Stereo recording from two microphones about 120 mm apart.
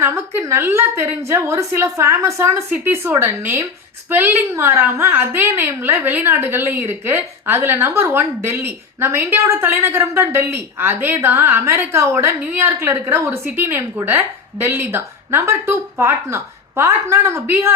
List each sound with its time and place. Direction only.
0.0 s a woman's voice: 20° right (ahead or behind)